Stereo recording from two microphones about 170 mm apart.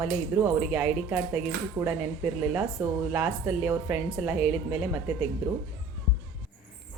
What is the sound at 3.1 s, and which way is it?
A woman's voice, 5° right (ahead or behind).